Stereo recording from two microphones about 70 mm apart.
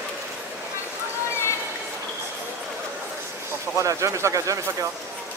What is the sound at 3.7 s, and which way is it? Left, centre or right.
Speech, right.